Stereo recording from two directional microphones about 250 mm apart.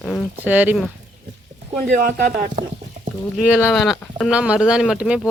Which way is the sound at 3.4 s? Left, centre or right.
Centre.